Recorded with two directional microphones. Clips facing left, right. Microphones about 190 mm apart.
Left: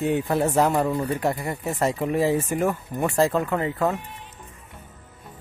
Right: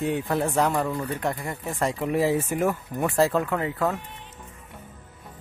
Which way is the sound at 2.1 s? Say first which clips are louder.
Right 1 dB; 5° right (ahead or behind).